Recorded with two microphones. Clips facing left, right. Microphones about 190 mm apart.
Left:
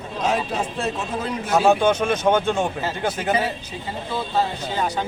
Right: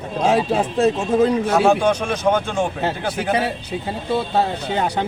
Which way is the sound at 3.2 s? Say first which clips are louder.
Right 4 dB; 65° right (ahead or behind).